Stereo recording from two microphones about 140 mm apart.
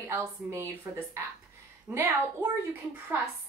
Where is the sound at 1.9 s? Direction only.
20° right (ahead or behind).